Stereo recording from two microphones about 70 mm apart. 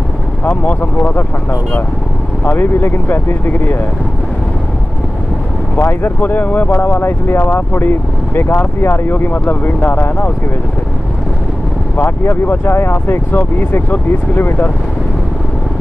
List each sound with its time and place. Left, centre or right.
0.5 s speech: left
2.5 s speech: left
5.8 s speech: left
12.0 s speech: left